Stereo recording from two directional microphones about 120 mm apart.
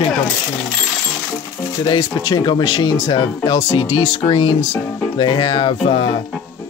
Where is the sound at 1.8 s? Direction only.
35° left (ahead or behind).